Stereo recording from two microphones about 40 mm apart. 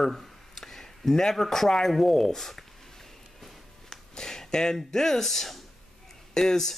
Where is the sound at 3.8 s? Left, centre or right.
Centre.